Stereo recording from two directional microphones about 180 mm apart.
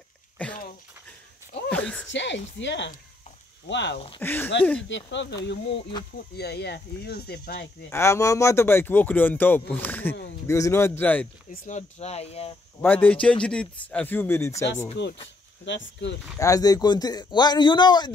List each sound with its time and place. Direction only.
0.4 s a sound: 5° left (ahead or behind)
1.7 s a sound: 5° left (ahead or behind)
2.0 s speech: 85° left
4.2 s speech: 10° left (ahead or behind)
4.8 s speech: 85° left
6.1 s speech: 65° left (ahead or behind)
7.9 s speech: 15° left (ahead or behind)
11.5 s speech: 45° left (ahead or behind)
12.8 s speech: 10° left (ahead or behind)
15.0 s speech: 75° left (ahead or behind)
16.3 s speech: 20° left (ahead or behind)